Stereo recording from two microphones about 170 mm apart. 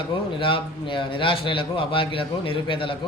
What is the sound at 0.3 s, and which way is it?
A man's voice, 30° left (ahead or behind).